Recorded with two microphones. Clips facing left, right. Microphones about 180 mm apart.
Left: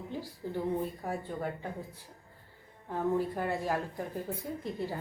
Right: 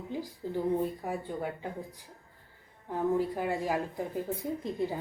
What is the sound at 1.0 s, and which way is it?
Speech, 15° right (ahead or behind).